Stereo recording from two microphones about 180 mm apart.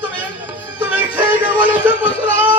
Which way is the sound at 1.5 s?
10° right (ahead or behind).